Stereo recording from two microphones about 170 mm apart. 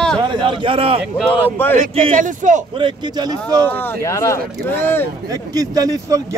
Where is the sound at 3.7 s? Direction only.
10° left (ahead or behind).